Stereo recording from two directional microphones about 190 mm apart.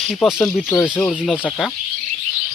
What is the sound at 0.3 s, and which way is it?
Speech, centre (ahead or behind).